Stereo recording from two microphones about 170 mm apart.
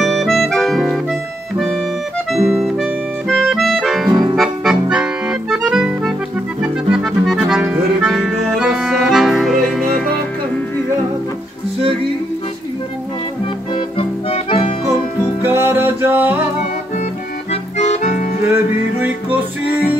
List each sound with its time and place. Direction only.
0.0 s music: centre (ahead or behind)
1.6 s accordion: centre (ahead or behind)
2.5 s music: centre (ahead or behind)
4.1 s music: 25° right (ahead or behind)
4.4 s accordion: 5° right (ahead or behind)
13.7 s music: 30° left (ahead or behind)
15.4 s music: 10° right (ahead or behind)
17.5 s accordion: 45° left (ahead or behind)
18.5 s music: 10° right (ahead or behind)